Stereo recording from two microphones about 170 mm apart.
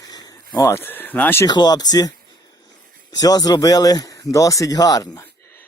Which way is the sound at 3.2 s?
20° left (ahead or behind).